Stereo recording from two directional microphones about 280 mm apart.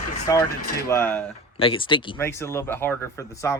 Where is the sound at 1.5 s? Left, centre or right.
Centre.